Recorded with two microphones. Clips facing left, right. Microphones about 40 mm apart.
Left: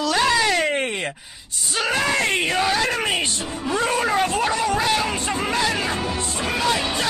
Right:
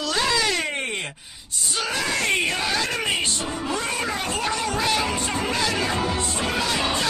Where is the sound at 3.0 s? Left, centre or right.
Left.